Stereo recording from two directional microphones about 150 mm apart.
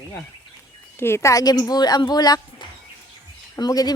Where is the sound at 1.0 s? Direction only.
20° left (ahead or behind).